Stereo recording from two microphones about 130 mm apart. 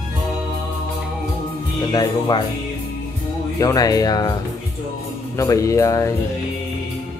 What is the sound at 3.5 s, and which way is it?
Speech, 30° left (ahead or behind).